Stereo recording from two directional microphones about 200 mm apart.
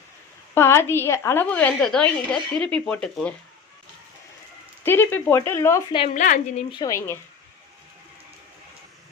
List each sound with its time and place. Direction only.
0.5 s a woman's voice: 10° left (ahead or behind)
4.8 s a woman's voice: 10° left (ahead or behind)
6.1 s a woman's voice: 40° left (ahead or behind)
6.7 s a woman's voice: 20° left (ahead or behind)